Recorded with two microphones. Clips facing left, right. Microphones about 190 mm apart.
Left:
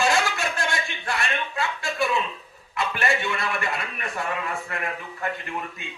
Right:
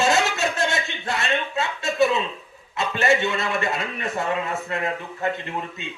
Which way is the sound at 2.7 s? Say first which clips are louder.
Right 4 dB; 25° right (ahead or behind).